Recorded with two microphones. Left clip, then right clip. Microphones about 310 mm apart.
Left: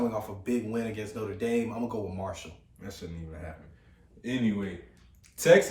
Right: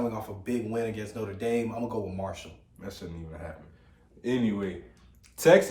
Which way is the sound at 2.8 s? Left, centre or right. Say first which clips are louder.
Right 3 dB; centre.